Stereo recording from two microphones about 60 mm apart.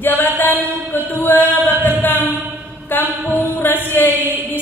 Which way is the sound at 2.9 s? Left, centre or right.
Left.